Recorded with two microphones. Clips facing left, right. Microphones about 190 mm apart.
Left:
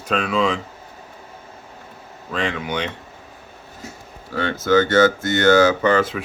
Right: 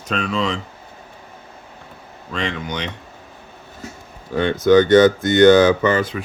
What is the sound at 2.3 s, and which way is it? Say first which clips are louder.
Speech: left 1 dB; centre (ahead or behind).